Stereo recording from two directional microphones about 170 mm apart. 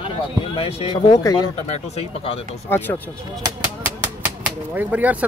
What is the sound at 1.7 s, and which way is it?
Speech, 35° left (ahead or behind).